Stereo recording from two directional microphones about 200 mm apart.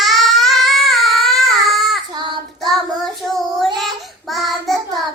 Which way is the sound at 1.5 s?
Centre (ahead or behind).